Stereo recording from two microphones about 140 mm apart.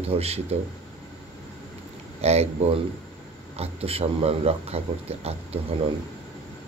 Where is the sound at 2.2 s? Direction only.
50° right (ahead or behind).